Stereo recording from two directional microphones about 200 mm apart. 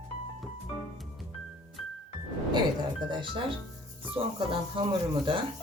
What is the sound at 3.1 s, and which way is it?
Speech, 25° right (ahead or behind).